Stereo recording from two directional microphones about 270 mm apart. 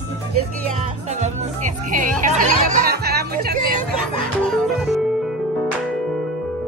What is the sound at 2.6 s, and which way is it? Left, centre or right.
Music, right.